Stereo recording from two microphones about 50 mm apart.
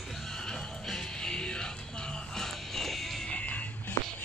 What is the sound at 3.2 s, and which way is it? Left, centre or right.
Music, left.